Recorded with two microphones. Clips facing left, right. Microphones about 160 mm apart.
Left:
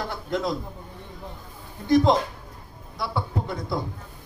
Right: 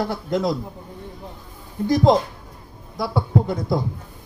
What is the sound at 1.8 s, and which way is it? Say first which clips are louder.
Speech: right 2 dB; 40° right (ahead or behind).